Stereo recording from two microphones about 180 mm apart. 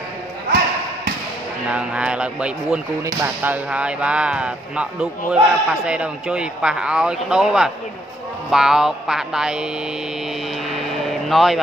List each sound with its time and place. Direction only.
1.7 s a man's voice: 5° right (ahead or behind)
11.2 s a man's voice: centre (ahead or behind)